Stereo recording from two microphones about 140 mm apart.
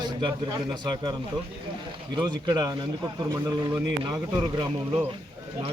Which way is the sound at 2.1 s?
30° right (ahead or behind).